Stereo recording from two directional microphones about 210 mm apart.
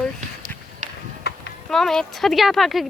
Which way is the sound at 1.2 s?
50° left (ahead or behind).